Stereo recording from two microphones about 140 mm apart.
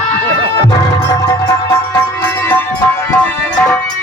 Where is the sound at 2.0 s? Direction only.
15° left (ahead or behind).